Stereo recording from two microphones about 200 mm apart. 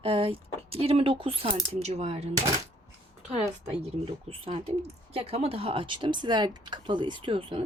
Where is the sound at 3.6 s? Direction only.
30° right (ahead or behind).